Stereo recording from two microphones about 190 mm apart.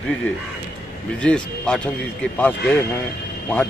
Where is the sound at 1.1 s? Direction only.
5° left (ahead or behind).